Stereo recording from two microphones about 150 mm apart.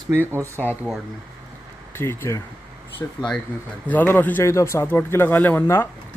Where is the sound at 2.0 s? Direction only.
15° left (ahead or behind).